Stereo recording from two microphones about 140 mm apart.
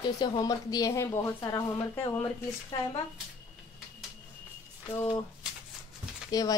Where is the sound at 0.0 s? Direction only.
30° left (ahead or behind).